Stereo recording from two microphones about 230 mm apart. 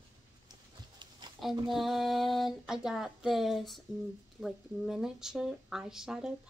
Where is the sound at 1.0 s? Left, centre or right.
Centre.